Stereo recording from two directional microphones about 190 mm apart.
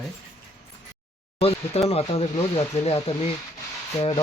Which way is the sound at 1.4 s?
30° left (ahead or behind).